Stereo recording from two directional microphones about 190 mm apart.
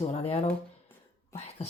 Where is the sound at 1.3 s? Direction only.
35° left (ahead or behind).